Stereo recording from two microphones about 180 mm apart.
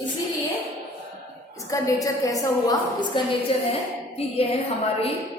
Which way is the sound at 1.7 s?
20° left (ahead or behind).